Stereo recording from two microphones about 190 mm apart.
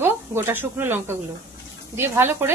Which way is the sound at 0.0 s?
10° right (ahead or behind).